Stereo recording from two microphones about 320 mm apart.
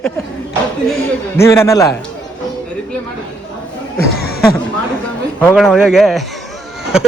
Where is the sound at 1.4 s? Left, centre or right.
Centre.